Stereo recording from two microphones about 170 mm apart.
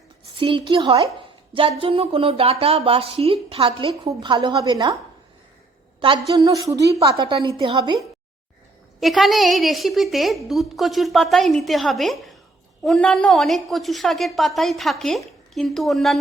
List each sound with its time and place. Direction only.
0.3 s a woman's voice: 30° right (ahead or behind)
6.0 s a woman's voice: 30° right (ahead or behind)
9.0 s speech: centre (ahead or behind)